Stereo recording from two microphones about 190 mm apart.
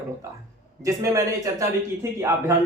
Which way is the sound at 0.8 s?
15° right (ahead or behind).